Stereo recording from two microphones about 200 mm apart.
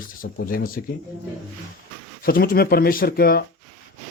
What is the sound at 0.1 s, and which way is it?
Speech, 45° left (ahead or behind).